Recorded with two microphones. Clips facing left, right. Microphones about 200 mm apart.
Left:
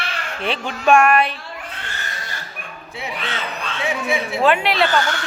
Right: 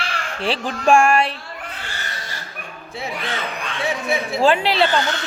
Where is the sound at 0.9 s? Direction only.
30° right (ahead or behind).